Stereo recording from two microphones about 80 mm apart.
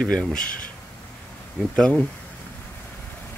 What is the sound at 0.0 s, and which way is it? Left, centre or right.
Speech, centre.